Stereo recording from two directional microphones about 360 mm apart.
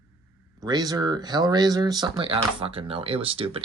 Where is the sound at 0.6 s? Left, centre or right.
Centre.